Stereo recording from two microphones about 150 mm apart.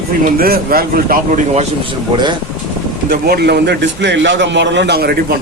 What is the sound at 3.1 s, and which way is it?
Speech, 90° right.